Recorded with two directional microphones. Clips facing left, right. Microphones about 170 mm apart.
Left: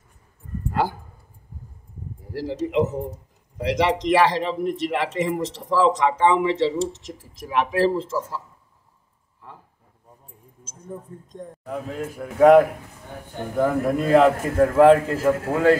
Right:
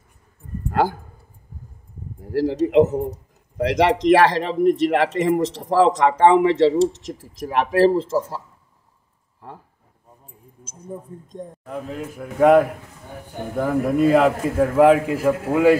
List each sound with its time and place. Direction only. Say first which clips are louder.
0.7 s a sound: right 4 dB; 45° right (ahead or behind)
2.3 s speech: right 7 dB; 45° right (ahead or behind)
10.6 s speech: right 2 dB; 10° right (ahead or behind)
11.6 s a man's voice: left 1 dB; centre (ahead or behind)
13.7 s a man's voice: right 4 dB; 5° right (ahead or behind)